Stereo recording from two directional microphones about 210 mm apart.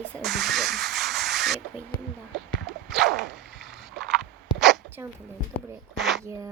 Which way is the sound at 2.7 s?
Centre (ahead or behind).